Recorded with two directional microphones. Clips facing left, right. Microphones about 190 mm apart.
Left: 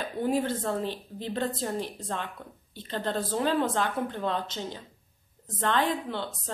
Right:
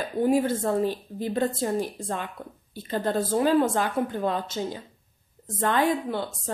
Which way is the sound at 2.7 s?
10° right (ahead or behind).